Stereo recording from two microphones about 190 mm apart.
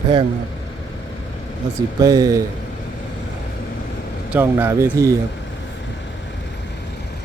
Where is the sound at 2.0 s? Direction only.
20° right (ahead or behind).